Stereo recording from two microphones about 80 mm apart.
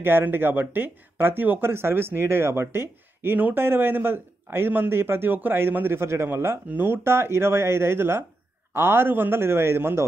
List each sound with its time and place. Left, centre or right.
0.0 s speech: right